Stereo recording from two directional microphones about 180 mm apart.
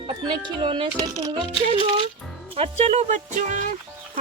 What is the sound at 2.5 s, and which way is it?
Speech, 35° right (ahead or behind).